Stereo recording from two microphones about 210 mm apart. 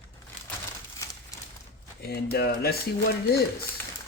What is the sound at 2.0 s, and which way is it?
Speech, 45° left (ahead or behind).